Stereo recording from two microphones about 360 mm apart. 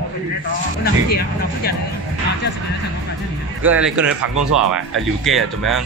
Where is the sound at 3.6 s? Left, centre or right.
Centre.